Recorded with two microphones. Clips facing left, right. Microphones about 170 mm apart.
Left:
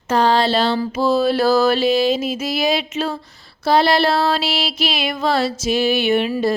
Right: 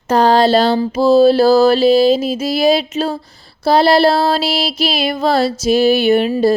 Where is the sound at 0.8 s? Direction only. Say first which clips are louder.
Right 7 dB; 30° right (ahead or behind).